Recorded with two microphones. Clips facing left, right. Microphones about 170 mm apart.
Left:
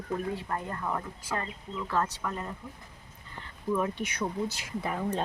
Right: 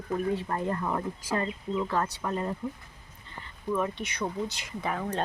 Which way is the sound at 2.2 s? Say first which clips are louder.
Right 5 dB; 35° right (ahead or behind).